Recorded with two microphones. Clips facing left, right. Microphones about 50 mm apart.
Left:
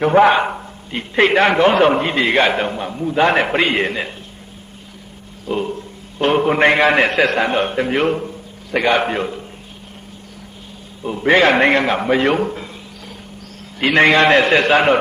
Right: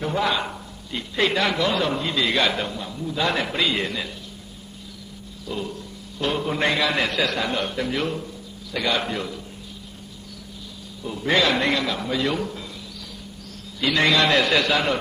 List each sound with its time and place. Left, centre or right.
0.0 s a man's voice: left
5.5 s a man's voice: left
11.0 s a man's voice: left
13.7 s a man's voice: left